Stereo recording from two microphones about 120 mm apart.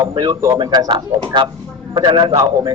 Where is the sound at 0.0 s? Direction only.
40° right (ahead or behind).